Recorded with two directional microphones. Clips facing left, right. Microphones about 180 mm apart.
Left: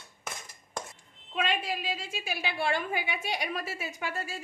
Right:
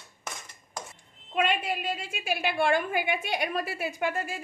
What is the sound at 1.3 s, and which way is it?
A woman's voice, 55° right (ahead or behind).